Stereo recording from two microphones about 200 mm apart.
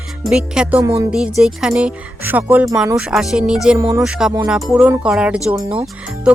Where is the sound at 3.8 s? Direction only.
15° right (ahead or behind).